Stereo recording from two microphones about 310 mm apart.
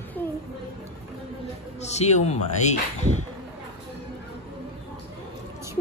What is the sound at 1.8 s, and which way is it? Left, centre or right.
Speech, left.